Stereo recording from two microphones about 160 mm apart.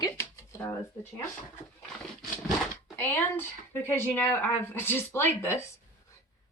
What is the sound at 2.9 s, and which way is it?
A woman's voice, 15° left (ahead or behind).